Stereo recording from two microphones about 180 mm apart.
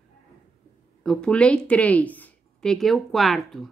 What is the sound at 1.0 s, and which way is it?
A woman's voice, 5° left (ahead or behind).